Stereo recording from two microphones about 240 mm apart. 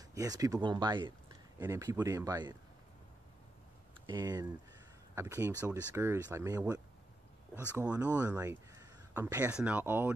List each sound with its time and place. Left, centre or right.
0.1 s speech: centre
4.0 s speech: centre